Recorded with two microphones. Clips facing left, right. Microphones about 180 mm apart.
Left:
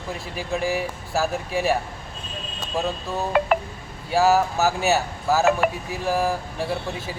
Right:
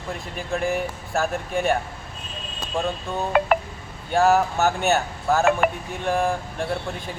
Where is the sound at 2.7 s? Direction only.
5° left (ahead or behind).